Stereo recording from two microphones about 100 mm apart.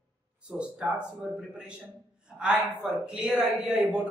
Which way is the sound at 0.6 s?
10° right (ahead or behind).